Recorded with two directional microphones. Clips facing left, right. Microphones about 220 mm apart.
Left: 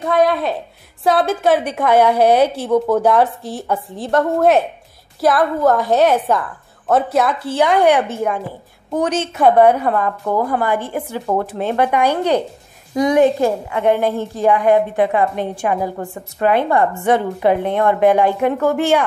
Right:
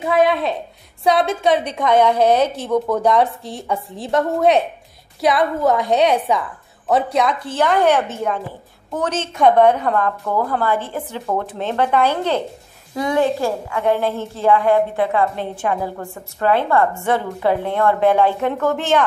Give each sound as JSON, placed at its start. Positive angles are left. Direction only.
{"t": 0.0, "sound": "a woman's voice", "side_deg": 0}